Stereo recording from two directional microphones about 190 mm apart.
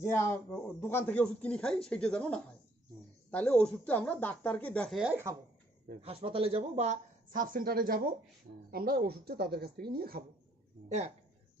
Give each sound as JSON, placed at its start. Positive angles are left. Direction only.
{"t": 0.0, "sound": "speech", "side_deg": 15}
{"t": 5.9, "sound": "speech", "side_deg": -30}